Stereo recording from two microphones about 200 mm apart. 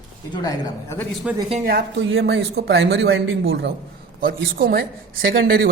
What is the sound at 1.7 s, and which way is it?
Speech, 60° right (ahead or behind).